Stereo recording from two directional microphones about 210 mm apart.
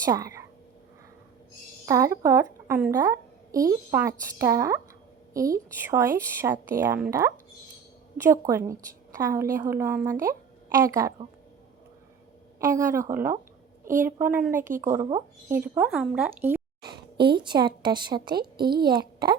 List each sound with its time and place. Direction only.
0.0 s speech: 15° right (ahead or behind)
1.9 s a woman's voice: 15° right (ahead or behind)
12.5 s a woman's voice: 15° right (ahead or behind)
17.3 s a woman's voice: 20° right (ahead or behind)
18.3 s a woman's voice: 45° right (ahead or behind)
18.9 s a child's voice: 20° right (ahead or behind)